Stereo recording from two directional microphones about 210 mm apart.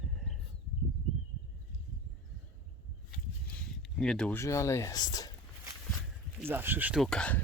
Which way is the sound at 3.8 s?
Centre (ahead or behind).